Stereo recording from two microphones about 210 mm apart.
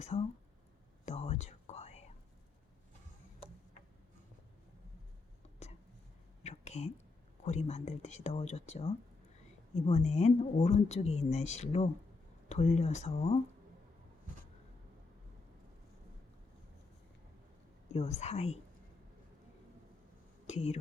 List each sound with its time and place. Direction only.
0.1 s speech: 30° left (ahead or behind)
1.0 s whispering: 30° left (ahead or behind)
6.4 s a sound: 30° left (ahead or behind)
7.4 s a woman's voice: 30° left (ahead or behind)
17.9 s a woman's voice: 30° left (ahead or behind)
20.5 s speech: 30° left (ahead or behind)